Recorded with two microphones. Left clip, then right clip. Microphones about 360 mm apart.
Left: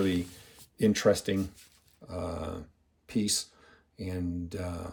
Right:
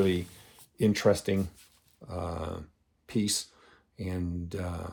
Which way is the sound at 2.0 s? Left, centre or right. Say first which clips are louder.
Even; right.